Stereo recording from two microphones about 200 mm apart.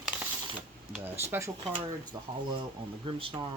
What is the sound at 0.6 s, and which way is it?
Speech, 5° right (ahead or behind).